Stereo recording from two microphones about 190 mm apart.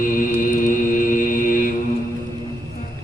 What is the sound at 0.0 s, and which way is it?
Mantra, 45° left (ahead or behind).